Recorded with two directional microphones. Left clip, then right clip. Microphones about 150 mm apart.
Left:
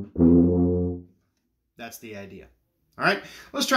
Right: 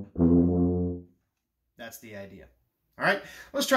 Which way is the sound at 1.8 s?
20° left (ahead or behind).